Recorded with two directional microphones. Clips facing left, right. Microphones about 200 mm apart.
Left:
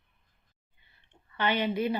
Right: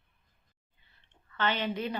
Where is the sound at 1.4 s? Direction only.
15° left (ahead or behind).